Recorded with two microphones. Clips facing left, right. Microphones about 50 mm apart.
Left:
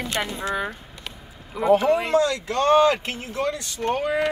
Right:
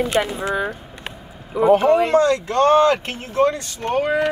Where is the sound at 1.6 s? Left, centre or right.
Right.